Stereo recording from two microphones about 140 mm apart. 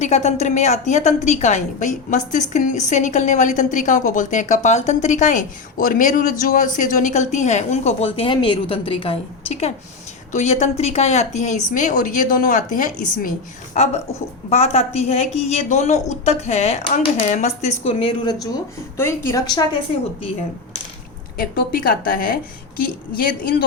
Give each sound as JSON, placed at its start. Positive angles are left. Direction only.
{"t": 0.0, "sound": "a woman's voice", "side_deg": 50}
{"t": 14.5, "sound": "a woman's voice", "side_deg": 45}
{"t": 18.9, "sound": "a woman's voice", "side_deg": 20}
{"t": 21.3, "sound": "a woman's voice", "side_deg": 90}